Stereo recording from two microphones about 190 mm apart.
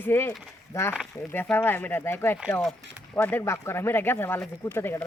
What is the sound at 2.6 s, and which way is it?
Speech, centre (ahead or behind).